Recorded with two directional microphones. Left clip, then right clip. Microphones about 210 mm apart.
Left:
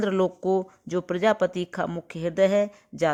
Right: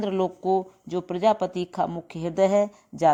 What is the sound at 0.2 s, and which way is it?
Speech, 25° left (ahead or behind).